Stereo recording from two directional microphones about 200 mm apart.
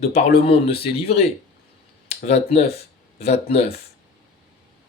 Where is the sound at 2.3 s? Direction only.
30° left (ahead or behind).